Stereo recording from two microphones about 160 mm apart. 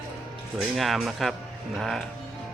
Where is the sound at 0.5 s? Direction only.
Centre (ahead or behind).